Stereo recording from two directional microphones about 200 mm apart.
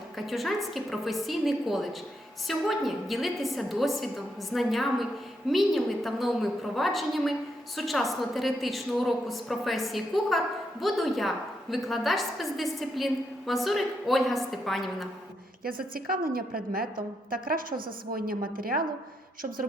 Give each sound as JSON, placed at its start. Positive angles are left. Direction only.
{"t": 0.2, "sound": "a woman's voice", "side_deg": 0}
{"t": 15.6, "sound": "a woman's voice", "side_deg": -45}